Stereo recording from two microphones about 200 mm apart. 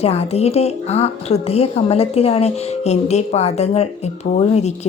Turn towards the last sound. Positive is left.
turn(degrees=35)  # may be behind; listen again after turning